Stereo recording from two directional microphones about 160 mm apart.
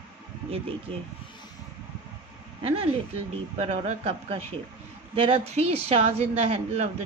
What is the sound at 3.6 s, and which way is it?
A woman's voice, 45° right (ahead or behind).